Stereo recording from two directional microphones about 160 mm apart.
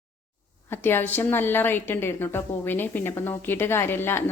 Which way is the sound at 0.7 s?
15° left (ahead or behind).